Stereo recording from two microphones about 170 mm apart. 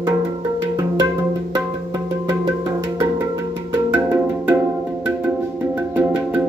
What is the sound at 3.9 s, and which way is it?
Music, 15° right (ahead or behind).